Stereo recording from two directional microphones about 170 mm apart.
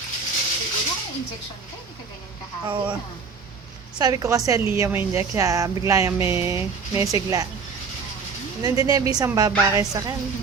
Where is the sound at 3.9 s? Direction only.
20° right (ahead or behind).